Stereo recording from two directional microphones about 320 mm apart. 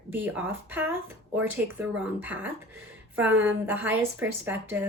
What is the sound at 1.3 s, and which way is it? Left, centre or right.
Speech, right.